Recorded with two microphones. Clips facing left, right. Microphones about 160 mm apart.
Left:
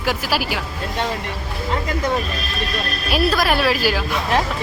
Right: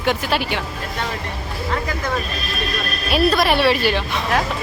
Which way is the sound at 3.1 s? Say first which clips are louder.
Right 2 dB; centre (ahead or behind).